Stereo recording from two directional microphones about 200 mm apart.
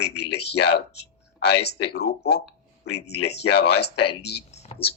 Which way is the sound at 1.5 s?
55° left (ahead or behind).